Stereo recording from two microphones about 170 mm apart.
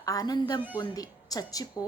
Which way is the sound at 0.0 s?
20° left (ahead or behind).